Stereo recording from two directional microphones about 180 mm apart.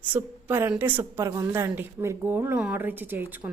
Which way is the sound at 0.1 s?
10° right (ahead or behind).